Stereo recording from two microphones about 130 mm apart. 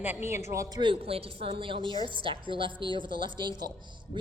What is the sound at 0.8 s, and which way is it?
A woman's voice, 45° right (ahead or behind).